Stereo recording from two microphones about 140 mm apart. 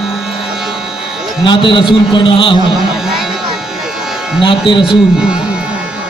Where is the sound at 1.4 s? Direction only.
35° left (ahead or behind).